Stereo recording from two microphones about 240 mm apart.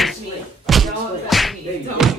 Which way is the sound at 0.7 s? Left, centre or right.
Centre.